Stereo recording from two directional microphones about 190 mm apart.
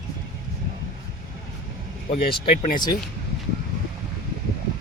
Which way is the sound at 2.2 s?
55° left (ahead or behind).